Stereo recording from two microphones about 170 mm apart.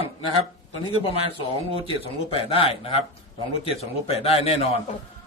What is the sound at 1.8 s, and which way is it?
Speech, 30° left (ahead or behind).